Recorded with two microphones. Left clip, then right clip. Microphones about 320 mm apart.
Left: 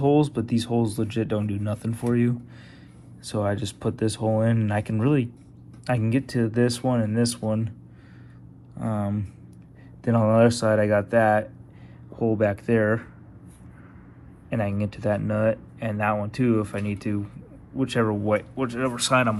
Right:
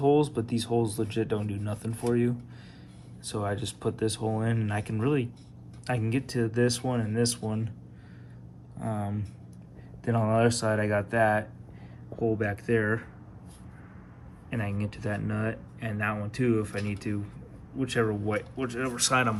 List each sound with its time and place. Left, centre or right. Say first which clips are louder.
0.2 s speech: left 4 dB; centre
8.8 s speech: left 5 dB; centre
14.5 s speech: left 7 dB; centre